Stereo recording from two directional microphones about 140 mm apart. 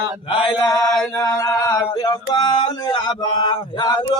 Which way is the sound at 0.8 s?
5° left (ahead or behind).